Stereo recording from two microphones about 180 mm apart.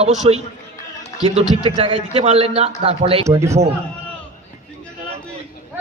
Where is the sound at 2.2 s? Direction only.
35° right (ahead or behind).